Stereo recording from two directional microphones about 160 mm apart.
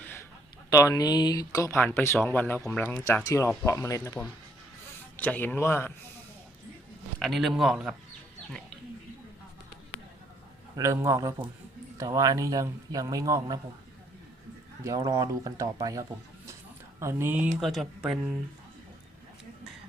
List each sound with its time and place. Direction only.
0.0 s a sound: 15° left (ahead or behind)
0.7 s a man's voice: 20° left (ahead or behind)
3.2 s a man's voice: 20° left (ahead or behind)
7.2 s speech: centre (ahead or behind)
10.8 s a man's voice: 20° right (ahead or behind)
14.8 s a man's voice: 20° right (ahead or behind)
17.6 s speech: centre (ahead or behind)